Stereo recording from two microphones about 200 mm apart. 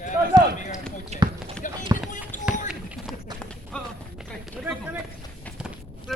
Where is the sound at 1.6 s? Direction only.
40° left (ahead or behind).